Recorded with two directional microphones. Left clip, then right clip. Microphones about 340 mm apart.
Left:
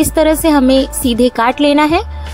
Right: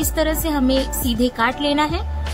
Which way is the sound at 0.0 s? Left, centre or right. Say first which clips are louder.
Left 10 dB; centre.